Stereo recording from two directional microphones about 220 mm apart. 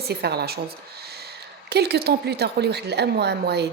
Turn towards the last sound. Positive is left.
turn(degrees=-50)  # may be behind; listen again after turning